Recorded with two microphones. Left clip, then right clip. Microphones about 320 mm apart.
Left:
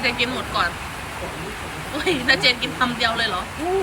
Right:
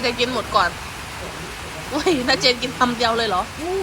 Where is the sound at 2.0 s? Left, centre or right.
Centre.